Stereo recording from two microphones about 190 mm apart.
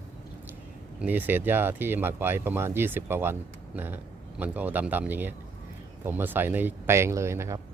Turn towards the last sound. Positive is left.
turn(degrees=-15)  # may be behind; listen again after turning